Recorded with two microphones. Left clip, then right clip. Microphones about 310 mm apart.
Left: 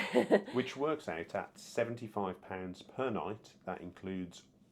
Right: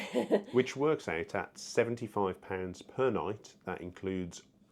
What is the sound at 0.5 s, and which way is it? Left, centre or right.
Speech, right.